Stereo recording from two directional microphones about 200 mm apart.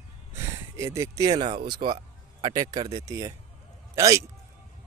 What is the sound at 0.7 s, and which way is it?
A man's voice, 15° right (ahead or behind).